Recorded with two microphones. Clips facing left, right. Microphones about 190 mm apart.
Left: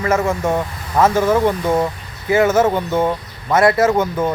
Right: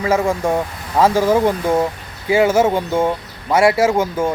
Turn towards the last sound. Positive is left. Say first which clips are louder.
# even
turn(degrees=-10)  # may be behind; listen again after turning